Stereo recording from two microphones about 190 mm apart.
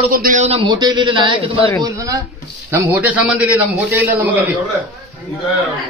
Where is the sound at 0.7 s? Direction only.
20° right (ahead or behind).